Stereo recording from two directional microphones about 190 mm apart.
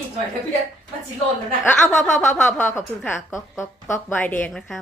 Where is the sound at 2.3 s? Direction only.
10° left (ahead or behind).